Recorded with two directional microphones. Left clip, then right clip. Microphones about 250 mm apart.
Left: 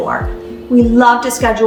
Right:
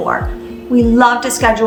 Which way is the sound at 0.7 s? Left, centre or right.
Centre.